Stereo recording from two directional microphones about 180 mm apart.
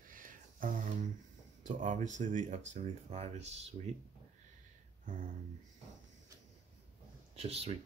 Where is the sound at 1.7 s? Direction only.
45° right (ahead or behind).